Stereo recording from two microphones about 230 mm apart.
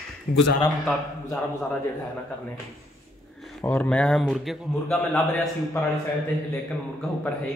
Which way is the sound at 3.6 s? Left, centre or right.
Centre.